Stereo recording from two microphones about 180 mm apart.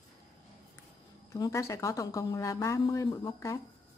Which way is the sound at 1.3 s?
20° left (ahead or behind).